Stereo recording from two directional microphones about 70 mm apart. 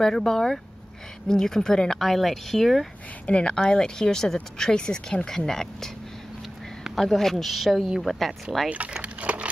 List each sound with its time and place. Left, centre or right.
0.0 s speech: centre
3.3 s speech: centre
8.6 s a sound: centre